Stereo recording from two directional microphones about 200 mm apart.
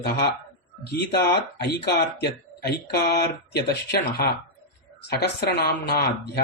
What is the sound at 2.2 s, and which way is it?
Speech, 55° left (ahead or behind).